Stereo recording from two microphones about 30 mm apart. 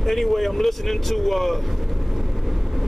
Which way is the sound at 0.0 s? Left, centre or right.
Centre.